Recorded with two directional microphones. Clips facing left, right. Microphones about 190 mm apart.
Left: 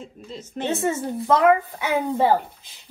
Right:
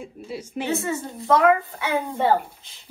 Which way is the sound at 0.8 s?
15° left (ahead or behind).